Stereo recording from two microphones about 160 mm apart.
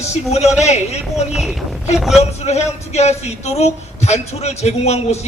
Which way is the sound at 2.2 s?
45° left (ahead or behind).